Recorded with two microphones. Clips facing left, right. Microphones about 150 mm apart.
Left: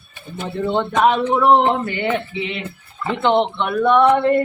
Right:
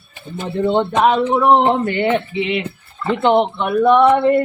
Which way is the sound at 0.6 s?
45° right (ahead or behind).